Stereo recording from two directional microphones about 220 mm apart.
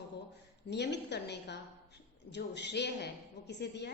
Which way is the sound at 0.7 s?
50° left (ahead or behind).